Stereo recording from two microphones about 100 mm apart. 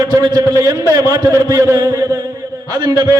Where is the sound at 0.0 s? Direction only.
35° right (ahead or behind).